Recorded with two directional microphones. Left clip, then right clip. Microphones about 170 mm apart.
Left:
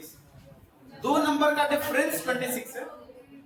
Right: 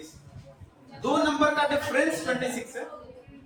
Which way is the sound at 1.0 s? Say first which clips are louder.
Even; 20° left (ahead or behind).